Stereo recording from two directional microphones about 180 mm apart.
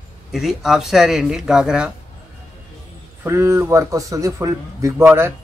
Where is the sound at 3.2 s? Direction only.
15° right (ahead or behind).